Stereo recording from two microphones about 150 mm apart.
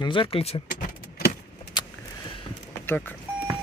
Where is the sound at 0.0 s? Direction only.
35° left (ahead or behind).